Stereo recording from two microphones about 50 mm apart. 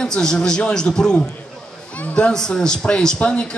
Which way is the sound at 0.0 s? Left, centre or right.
Centre.